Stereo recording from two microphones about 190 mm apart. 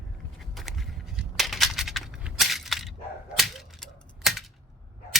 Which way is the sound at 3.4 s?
Centre (ahead or behind).